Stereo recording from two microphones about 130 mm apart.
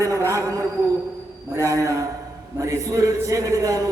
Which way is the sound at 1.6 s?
25° right (ahead or behind).